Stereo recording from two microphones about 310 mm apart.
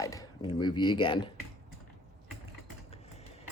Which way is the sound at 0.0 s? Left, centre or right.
Centre.